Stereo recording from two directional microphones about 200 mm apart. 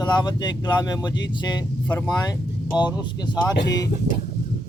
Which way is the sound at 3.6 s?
20° left (ahead or behind).